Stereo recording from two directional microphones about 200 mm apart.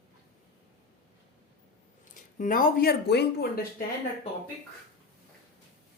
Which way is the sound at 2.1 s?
40° left (ahead or behind).